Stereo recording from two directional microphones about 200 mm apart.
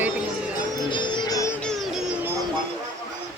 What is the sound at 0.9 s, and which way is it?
Music, 20° left (ahead or behind).